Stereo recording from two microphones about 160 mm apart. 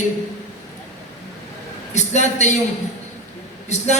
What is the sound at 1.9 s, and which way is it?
Speech, 45° left (ahead or behind).